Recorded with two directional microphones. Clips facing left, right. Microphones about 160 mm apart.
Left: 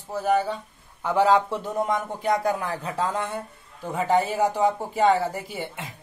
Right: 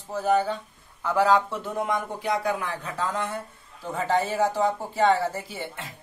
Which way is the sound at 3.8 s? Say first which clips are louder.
Left 3 dB; 10° left (ahead or behind).